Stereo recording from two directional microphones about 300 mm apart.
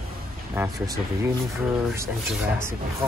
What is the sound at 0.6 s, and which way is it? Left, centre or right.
Speech, centre.